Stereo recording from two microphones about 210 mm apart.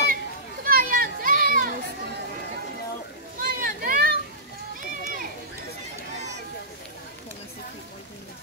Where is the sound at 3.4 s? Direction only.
45° right (ahead or behind).